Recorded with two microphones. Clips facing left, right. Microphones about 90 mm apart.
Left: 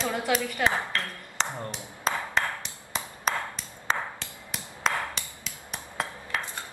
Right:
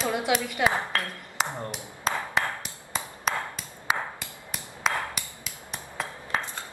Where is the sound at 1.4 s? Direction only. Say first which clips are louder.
Right 2 dB; 10° right (ahead or behind).